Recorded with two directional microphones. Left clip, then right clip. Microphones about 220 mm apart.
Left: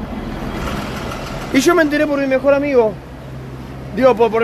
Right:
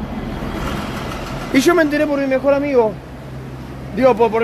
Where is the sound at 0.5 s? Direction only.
45° left (ahead or behind).